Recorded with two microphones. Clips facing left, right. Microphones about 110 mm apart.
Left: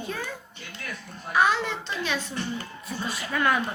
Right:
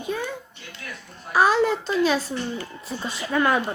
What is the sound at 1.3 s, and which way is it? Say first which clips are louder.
A woman's voice: right 4 dB; 40° right (ahead or behind).